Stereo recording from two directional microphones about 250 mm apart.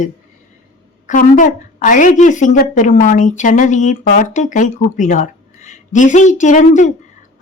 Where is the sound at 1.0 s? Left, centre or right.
Left.